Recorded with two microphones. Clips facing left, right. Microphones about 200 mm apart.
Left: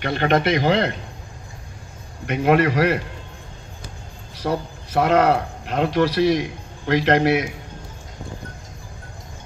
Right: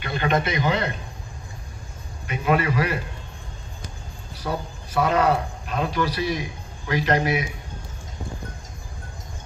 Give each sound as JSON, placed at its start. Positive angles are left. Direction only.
{"t": 0.0, "sound": "speech", "side_deg": 75}
{"t": 2.2, "sound": "a man's voice", "side_deg": 75}
{"t": 4.4, "sound": "a man's voice", "side_deg": 80}